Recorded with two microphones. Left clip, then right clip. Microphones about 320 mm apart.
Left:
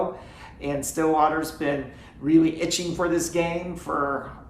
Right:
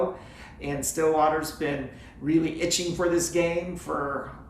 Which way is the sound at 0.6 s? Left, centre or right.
Centre.